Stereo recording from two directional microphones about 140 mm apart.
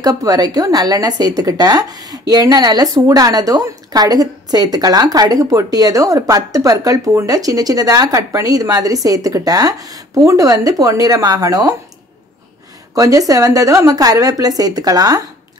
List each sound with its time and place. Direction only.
0.0 s a woman's voice: 25° right (ahead or behind)
12.9 s a woman's voice: 25° right (ahead or behind)